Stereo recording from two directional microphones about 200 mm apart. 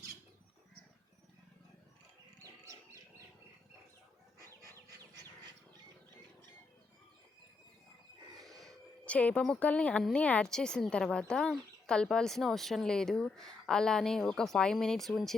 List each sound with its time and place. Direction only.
2.4 s bird: 15° right (ahead or behind)
8.4 s a woman's voice: centre (ahead or behind)